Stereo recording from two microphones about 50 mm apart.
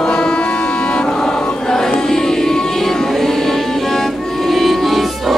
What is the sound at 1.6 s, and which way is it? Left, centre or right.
Music, centre.